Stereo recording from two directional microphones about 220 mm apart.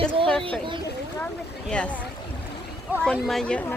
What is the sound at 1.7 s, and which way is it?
Speech, 5° left (ahead or behind).